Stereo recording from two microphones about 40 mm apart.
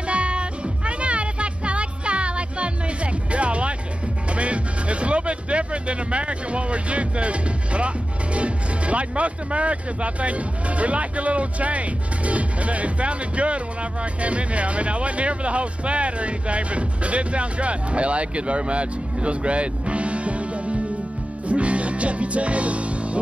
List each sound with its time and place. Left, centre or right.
0.0 s music: right
4.3 s speech: right
21.5 s music: right